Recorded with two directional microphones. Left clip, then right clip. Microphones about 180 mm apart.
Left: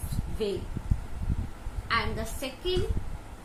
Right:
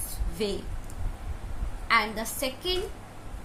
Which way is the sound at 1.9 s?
55° right (ahead or behind).